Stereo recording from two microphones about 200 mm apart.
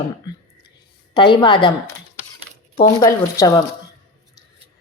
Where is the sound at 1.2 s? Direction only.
25° left (ahead or behind).